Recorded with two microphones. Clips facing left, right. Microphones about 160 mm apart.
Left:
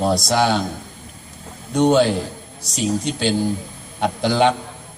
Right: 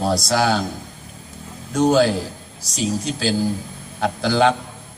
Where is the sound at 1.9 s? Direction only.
25° left (ahead or behind).